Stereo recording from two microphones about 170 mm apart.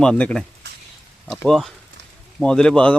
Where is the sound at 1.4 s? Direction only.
Centre (ahead or behind).